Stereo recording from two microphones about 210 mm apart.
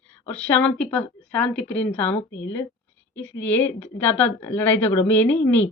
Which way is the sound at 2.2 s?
60° left (ahead or behind).